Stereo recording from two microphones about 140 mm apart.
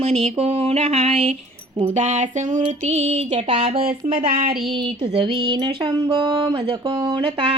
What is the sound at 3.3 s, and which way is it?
Music, 40° right (ahead or behind).